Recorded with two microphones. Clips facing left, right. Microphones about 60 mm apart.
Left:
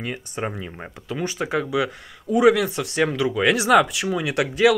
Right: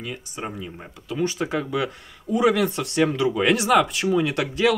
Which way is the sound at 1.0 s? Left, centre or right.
Left.